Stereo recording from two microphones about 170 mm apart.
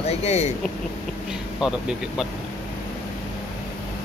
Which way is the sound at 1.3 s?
5° right (ahead or behind).